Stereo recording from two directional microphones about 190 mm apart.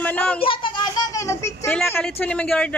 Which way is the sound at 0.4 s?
25° left (ahead or behind).